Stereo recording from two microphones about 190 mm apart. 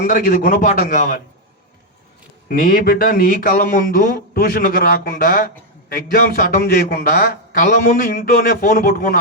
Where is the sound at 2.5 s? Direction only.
50° left (ahead or behind).